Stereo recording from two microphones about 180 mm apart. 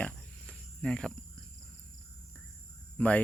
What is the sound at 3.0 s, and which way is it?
Speech, 5° left (ahead or behind).